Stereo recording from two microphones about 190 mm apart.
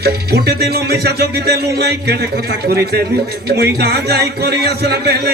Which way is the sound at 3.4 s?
60° right (ahead or behind).